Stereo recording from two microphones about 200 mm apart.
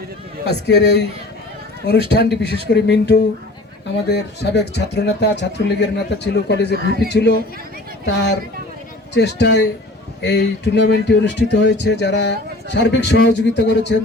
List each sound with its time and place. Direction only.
0.4 s speech: 60° left (ahead or behind)
6.7 s a man's voice: 50° right (ahead or behind)
7.1 s speech: 55° left (ahead or behind)